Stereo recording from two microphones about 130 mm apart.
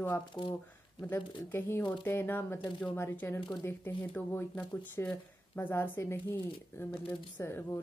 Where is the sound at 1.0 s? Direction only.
20° left (ahead or behind).